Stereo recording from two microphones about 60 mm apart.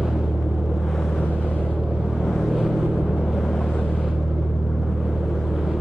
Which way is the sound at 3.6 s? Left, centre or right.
Centre.